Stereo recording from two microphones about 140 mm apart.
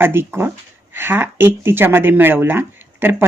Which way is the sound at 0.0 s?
15° right (ahead or behind).